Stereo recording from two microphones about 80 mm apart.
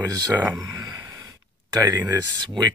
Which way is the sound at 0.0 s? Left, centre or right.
Right.